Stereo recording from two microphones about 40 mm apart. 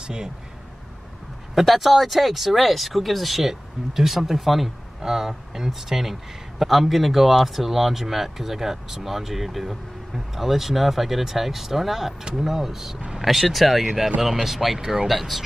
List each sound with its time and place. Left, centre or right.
0.0 s speech: centre
1.5 s speech: centre
14.8 s speech: centre
15.0 s speech: centre